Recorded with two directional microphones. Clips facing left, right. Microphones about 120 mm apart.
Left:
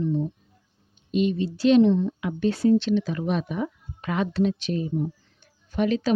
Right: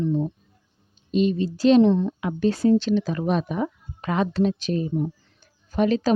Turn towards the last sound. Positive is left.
turn(degrees=-40)  # may be behind; listen again after turning